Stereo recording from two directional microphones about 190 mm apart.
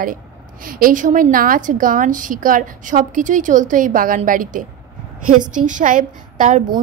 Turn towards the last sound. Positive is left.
turn(degrees=-40)  # may be behind; listen again after turning